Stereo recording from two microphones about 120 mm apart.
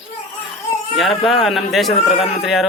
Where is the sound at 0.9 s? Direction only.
Centre (ahead or behind).